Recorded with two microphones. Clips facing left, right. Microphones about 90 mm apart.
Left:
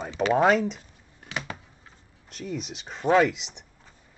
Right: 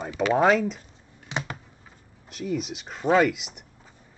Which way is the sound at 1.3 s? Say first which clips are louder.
Right 3 dB; 25° right (ahead or behind).